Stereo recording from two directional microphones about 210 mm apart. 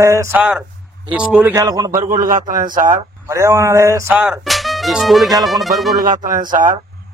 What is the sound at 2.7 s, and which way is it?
Speech, 40° right (ahead or behind).